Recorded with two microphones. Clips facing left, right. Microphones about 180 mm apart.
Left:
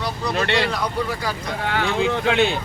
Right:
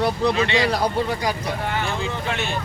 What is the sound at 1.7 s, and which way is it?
Speech, 70° left (ahead or behind).